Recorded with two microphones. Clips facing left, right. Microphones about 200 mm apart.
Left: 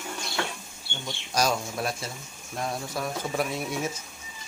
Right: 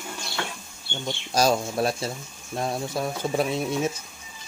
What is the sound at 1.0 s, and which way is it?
Speech, 30° right (ahead or behind).